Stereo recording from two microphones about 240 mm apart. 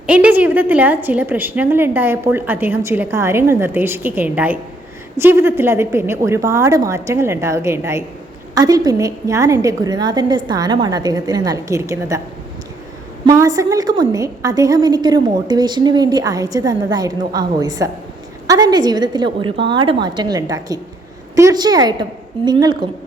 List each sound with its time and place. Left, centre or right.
0.1 s a woman's voice: centre
13.2 s a woman's voice: centre